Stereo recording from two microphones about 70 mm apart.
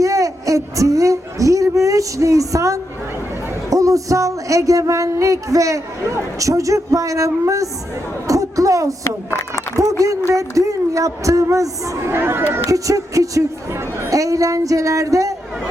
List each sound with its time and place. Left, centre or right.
0.0 s a sound: right
3.7 s speech: right
8.3 s a sound: right
9.7 s speech: right
12.1 s speech: right
12.7 s speech: right